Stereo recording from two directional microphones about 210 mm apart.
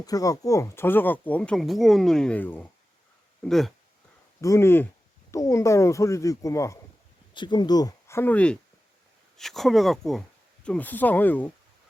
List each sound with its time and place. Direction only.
0.0 s speech: 15° left (ahead or behind); by 3.7 s centre (ahead or behind)
4.4 s speech: 15° left (ahead or behind)